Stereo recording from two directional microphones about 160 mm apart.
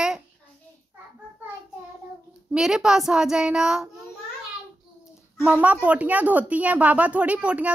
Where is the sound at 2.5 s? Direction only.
5° right (ahead or behind).